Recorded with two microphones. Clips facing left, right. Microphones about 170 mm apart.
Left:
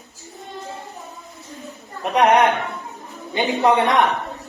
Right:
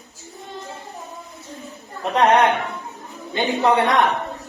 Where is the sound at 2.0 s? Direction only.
15° left (ahead or behind).